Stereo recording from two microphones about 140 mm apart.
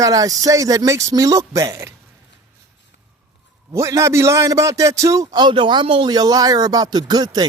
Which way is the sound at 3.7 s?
20° right (ahead or behind).